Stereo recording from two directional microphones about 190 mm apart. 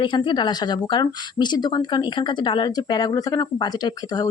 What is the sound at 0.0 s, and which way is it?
Speech, 25° left (ahead or behind).